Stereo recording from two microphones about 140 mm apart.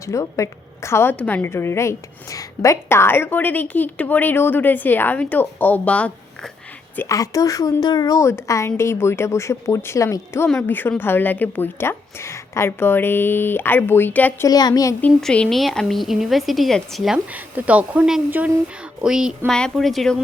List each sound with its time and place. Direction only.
0.0 s a woman's voice: 20° left (ahead or behind)
14.4 s a woman's voice: 25° left (ahead or behind)
15.0 s a woman's voice: 5° left (ahead or behind)
17.3 s a woman's voice: 10° right (ahead or behind)